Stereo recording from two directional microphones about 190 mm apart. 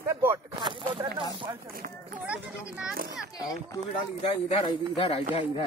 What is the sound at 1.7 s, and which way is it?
Speech, 50° right (ahead or behind).